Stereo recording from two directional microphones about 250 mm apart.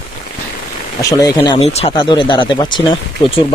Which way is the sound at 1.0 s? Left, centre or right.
Centre.